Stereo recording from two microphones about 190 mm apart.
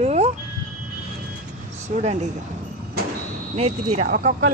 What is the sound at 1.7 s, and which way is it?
Speech, 35° right (ahead or behind).